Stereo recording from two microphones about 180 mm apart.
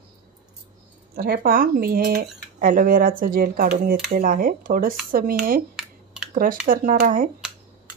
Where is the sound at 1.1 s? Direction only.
60° right (ahead or behind).